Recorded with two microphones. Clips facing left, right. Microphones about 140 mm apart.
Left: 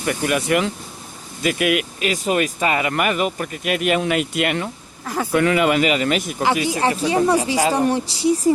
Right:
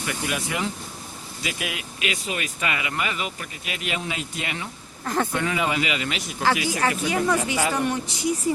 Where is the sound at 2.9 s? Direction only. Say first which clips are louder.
Left 9 dB; 55° left (ahead or behind).